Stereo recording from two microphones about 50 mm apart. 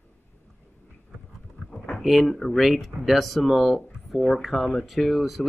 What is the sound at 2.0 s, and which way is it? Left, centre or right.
Speech, centre.